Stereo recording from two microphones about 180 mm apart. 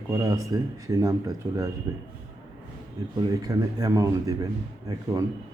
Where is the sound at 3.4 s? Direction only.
20° right (ahead or behind).